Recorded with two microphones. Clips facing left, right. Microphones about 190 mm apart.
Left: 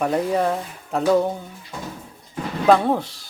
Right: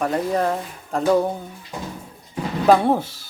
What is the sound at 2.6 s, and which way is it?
Speech, 5° right (ahead or behind).